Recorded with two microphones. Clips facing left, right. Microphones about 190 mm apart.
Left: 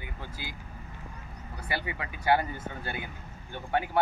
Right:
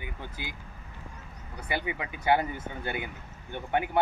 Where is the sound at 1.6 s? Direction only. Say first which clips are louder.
Right 2 dB; 20° right (ahead or behind).